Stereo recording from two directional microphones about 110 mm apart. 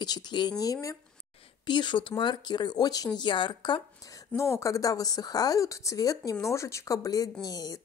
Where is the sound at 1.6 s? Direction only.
45° left (ahead or behind).